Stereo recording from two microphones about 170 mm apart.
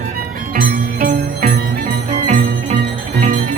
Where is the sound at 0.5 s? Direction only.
60° right (ahead or behind).